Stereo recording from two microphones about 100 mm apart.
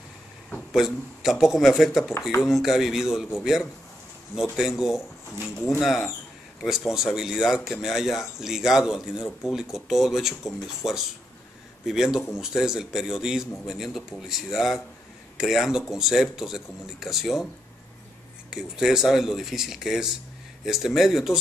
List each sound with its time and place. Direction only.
0.7 s speech: 5° right (ahead or behind)
5.4 s speech: 25° left (ahead or behind)
5.8 s speech: centre (ahead or behind)
18.5 s speech: 5° right (ahead or behind)